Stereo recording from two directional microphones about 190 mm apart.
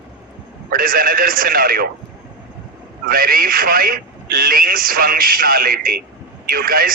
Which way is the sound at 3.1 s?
50° right (ahead or behind).